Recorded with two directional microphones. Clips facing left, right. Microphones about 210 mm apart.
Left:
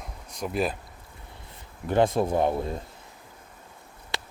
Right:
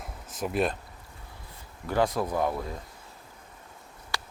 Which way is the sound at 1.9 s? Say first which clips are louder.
Left 4 dB; 25° left (ahead or behind).